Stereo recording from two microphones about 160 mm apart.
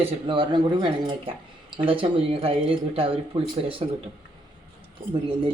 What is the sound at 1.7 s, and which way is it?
Speech, 35° right (ahead or behind).